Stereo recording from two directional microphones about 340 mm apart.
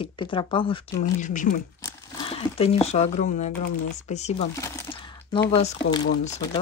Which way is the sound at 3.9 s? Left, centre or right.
Centre.